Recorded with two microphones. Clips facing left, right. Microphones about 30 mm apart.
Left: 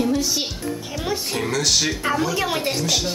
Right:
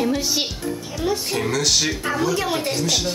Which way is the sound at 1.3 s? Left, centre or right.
Centre.